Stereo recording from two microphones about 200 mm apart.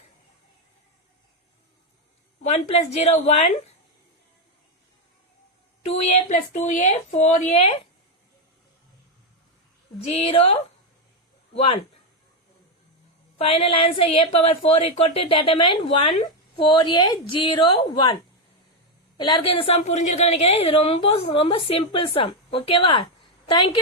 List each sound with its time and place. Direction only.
2.4 s speech: 30° left (ahead or behind)
5.8 s speech: 30° left (ahead or behind)
10.1 s a woman's voice: 30° left (ahead or behind)
13.4 s a woman's voice: 30° left (ahead or behind)